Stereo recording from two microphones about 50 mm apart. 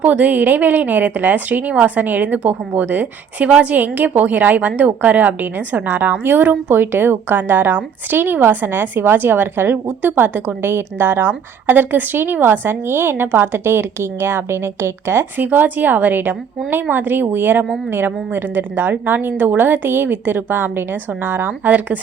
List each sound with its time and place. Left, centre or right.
0.0 s a woman's voice: right
15.4 s a woman's voice: right